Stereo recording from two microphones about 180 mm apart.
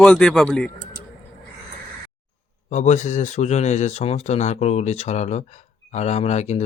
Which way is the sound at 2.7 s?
40° left (ahead or behind).